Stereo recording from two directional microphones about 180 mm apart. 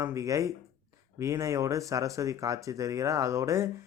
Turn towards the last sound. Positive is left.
turn(degrees=-15)  # may be behind; listen again after turning